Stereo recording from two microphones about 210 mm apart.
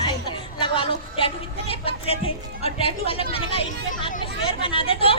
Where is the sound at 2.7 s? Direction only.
25° left (ahead or behind).